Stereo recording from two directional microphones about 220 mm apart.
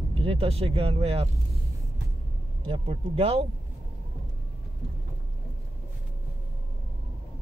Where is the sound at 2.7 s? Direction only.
25° right (ahead or behind).